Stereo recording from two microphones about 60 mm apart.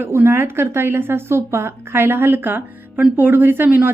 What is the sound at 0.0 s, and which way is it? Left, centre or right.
Speech, right.